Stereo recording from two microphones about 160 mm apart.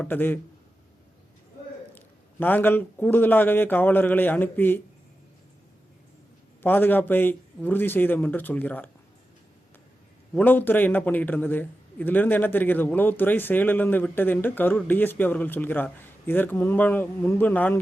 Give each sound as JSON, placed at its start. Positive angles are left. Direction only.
{"t": 0.0, "sound": "a man's voice", "side_deg": 10}
{"t": 2.0, "sound": "a man's voice", "side_deg": 10}
{"t": 6.6, "sound": "a man's voice", "side_deg": 10}
{"t": 10.3, "sound": "a man's voice", "side_deg": 10}